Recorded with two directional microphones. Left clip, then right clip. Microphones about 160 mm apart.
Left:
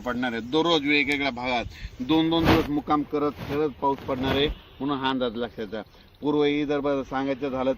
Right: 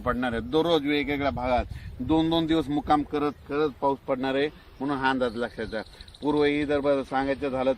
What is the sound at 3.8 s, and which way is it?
Speech, 50° left (ahead or behind).